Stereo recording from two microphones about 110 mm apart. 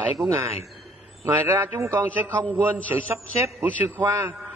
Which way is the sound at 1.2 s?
25° right (ahead or behind).